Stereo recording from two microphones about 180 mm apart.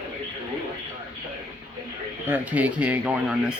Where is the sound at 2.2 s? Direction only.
10° right (ahead or behind).